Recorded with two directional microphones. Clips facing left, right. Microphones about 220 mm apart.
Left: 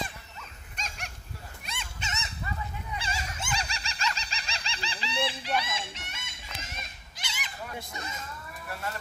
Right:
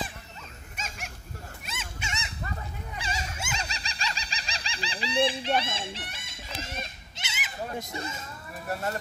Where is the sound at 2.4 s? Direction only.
45° right (ahead or behind).